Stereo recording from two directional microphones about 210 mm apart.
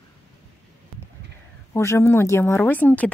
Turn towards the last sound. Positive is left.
turn(degrees=10)  # may be behind; listen again after turning